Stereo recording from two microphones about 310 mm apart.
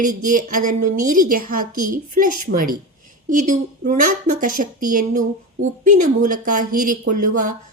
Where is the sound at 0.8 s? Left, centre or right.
Right.